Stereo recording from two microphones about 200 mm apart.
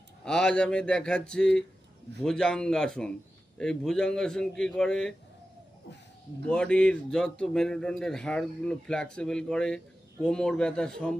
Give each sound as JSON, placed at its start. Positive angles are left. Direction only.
{"t": 0.3, "sound": "speech", "side_deg": 5}
{"t": 6.5, "sound": "speech", "side_deg": 5}